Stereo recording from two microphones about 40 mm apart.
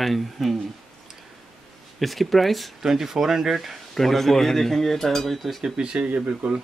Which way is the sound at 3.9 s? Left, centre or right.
Centre.